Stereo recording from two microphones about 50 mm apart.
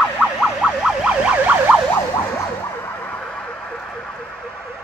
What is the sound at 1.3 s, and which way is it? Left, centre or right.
Emergency vehicle, right.